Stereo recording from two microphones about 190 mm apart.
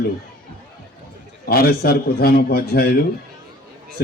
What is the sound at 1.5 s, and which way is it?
A man's voice, 55° left (ahead or behind).